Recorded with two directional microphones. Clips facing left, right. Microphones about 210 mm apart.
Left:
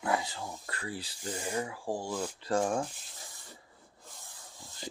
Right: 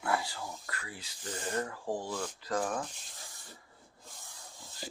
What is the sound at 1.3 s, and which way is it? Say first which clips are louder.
Speech: left 1 dB; 10° left (ahead or behind).